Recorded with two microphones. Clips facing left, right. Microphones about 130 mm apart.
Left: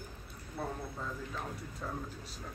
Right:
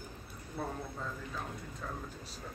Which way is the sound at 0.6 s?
Centre (ahead or behind).